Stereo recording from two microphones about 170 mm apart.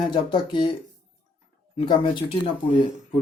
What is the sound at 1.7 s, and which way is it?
Speech, 30° left (ahead or behind).